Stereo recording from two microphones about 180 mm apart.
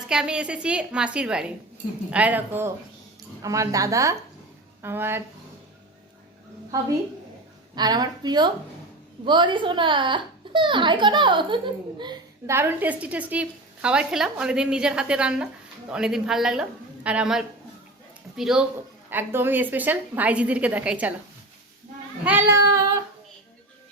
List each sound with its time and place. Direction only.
0.1 s a woman's voice: 5° right (ahead or behind)
6.7 s a woman's voice: 20° right (ahead or behind)
22.2 s a woman's voice: 10° right (ahead or behind)